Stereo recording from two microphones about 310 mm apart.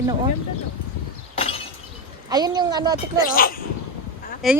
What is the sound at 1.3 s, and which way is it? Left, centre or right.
Breaking, centre.